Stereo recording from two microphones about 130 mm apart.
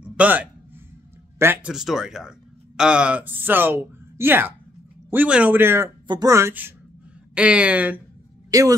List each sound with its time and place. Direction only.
0.0 s a sound: 10° right (ahead or behind)
1.4 s speech: 15° right (ahead or behind)
1.7 s speech: 5° right (ahead or behind)
6.0 s speech: 30° right (ahead or behind)
7.3 s speech: 10° right (ahead or behind)
8.5 s speech: 25° right (ahead or behind)